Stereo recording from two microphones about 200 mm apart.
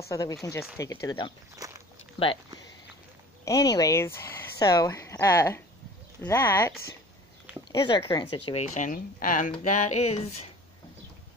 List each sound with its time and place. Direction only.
0.1 s speech: 15° left (ahead or behind)
1.6 s walk: 15° right (ahead or behind)
2.2 s speech: 25° left (ahead or behind)
3.4 s speech: 20° left (ahead or behind)
7.7 s a woman's voice: 20° left (ahead or behind)